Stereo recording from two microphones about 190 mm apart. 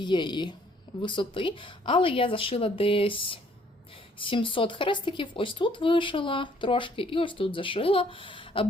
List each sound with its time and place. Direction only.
0.0 s speech: 25° left (ahead or behind)